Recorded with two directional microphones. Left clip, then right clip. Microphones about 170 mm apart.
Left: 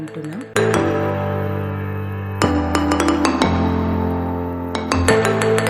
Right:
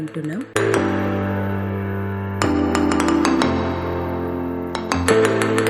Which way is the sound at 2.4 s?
Centre (ahead or behind).